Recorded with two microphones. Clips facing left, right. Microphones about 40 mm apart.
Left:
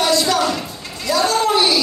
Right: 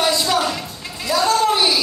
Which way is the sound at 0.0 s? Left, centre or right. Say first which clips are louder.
Left 2 dB; centre.